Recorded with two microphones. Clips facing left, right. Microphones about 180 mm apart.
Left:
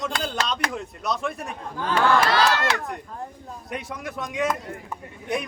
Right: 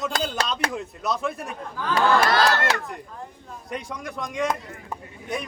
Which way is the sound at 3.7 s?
5° left (ahead or behind).